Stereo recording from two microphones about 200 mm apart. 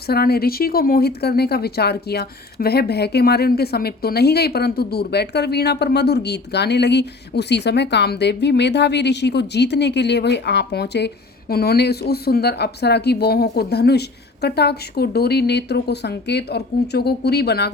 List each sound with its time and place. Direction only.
0.1 s speech: 50° left (ahead or behind)